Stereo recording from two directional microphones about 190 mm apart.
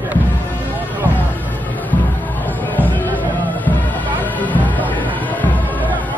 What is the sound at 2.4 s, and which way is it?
Music, 10° left (ahead or behind).